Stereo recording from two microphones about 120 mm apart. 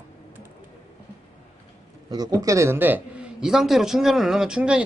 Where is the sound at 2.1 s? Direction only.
30° right (ahead or behind); by 3.2 s 15° right (ahead or behind).